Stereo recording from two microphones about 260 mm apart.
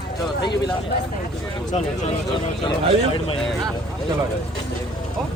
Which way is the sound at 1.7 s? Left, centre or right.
Left.